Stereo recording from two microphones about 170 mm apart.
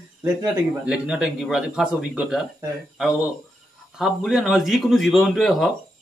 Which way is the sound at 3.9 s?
Centre (ahead or behind).